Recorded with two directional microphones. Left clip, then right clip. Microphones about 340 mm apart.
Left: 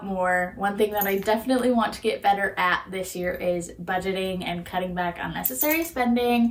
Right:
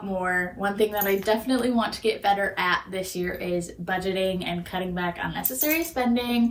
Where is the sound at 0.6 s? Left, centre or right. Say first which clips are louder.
Left 1 dB; centre.